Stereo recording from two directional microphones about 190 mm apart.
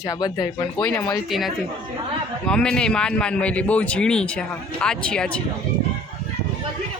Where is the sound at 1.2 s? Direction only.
Centre (ahead or behind).